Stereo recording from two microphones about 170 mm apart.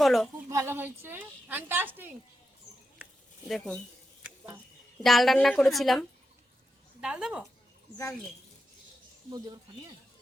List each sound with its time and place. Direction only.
0.0 s speech: centre (ahead or behind)
0.5 s a woman's voice: 15° right (ahead or behind)
3.5 s a woman's voice: 5° left (ahead or behind)
4.2 s a sound: 10° right (ahead or behind)
5.0 s a woman's voice: centre (ahead or behind)